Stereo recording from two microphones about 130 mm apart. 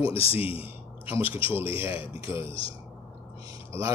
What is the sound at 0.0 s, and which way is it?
Speech, 45° left (ahead or behind).